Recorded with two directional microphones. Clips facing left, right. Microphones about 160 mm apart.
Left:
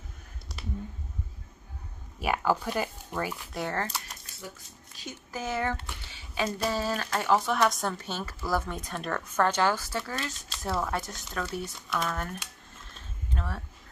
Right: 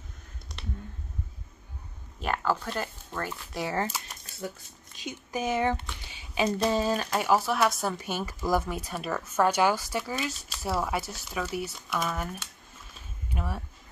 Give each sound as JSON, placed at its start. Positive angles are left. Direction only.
{"t": 2.1, "sound": "speech", "side_deg": 10}
{"t": 3.7, "sound": "speech", "side_deg": -5}
{"t": 12.8, "sound": "a sound", "side_deg": -10}